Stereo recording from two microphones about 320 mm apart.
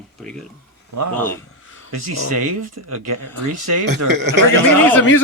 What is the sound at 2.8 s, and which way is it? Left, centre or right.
Speech, right.